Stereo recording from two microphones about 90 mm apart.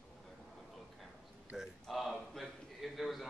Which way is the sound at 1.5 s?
5° right (ahead or behind).